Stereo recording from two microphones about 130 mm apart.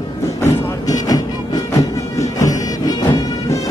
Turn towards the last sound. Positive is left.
turn(degrees=30)  # may be behind; listen again after turning